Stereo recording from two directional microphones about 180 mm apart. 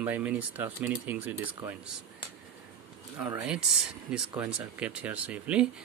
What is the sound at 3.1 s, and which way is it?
Speech, 10° right (ahead or behind).